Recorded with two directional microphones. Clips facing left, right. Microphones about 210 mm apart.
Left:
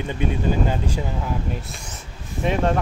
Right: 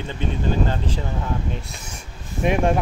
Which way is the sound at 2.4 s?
15° right (ahead or behind).